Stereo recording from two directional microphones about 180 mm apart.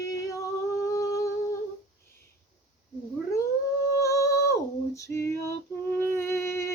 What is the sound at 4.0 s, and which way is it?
Female singing, 15° left (ahead or behind).